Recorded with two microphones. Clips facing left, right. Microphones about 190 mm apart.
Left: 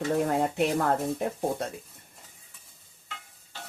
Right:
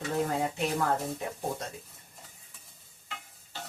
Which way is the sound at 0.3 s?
60° left (ahead or behind).